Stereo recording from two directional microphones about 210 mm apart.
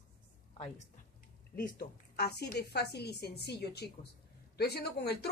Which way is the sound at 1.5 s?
45° left (ahead or behind).